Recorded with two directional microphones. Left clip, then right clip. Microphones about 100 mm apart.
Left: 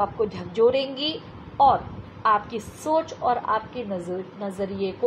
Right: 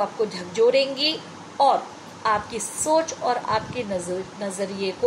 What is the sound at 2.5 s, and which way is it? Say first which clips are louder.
Speech: right 2 dB; 55° left (ahead or behind).